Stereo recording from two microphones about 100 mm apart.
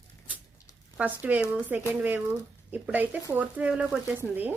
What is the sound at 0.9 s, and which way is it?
Speech, 15° right (ahead or behind).